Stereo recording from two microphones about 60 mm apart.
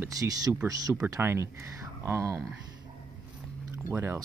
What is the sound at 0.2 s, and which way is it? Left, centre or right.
Speech, right.